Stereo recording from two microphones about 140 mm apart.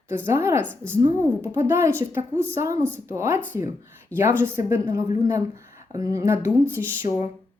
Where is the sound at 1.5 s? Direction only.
15° right (ahead or behind).